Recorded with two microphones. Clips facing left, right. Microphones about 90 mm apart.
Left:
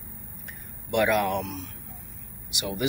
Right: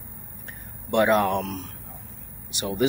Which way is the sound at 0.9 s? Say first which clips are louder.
Right 3 dB; 30° right (ahead or behind).